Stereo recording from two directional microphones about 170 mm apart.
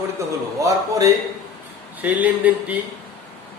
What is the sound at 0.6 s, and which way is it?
Speech, 20° right (ahead or behind).